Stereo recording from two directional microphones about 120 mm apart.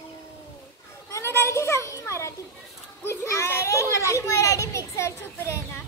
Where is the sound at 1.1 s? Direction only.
25° left (ahead or behind).